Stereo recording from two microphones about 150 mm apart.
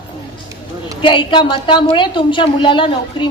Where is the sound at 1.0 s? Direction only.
35° left (ahead or behind).